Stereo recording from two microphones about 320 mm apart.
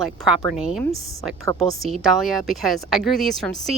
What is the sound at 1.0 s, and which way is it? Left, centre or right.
Speech, right.